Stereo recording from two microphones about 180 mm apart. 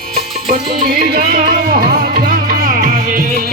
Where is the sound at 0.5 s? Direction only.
35° right (ahead or behind).